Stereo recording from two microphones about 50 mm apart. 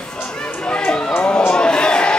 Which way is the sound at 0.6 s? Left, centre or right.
Left.